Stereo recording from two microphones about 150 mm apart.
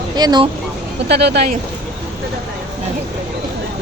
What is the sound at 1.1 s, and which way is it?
Speech, 90° right.